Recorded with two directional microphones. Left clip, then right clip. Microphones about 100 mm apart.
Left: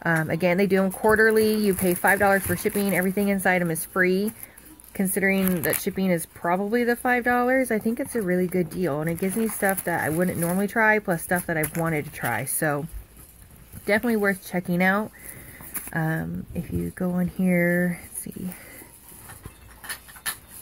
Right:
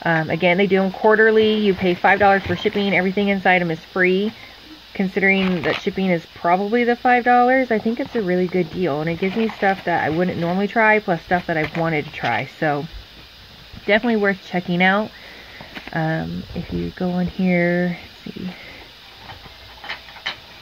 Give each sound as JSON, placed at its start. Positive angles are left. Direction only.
{"t": 0.0, "sound": "speech", "side_deg": 25}
{"t": 1.4, "sound": "speech", "side_deg": 40}
{"t": 1.7, "sound": "speech", "side_deg": 20}
{"t": 9.6, "sound": "speech", "side_deg": 20}
{"t": 13.8, "sound": "speech", "side_deg": 25}
{"t": 14.1, "sound": "speech", "side_deg": 10}
{"t": 17.0, "sound": "speech", "side_deg": 25}